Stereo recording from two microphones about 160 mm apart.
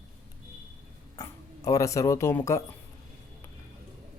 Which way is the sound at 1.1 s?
20° left (ahead or behind).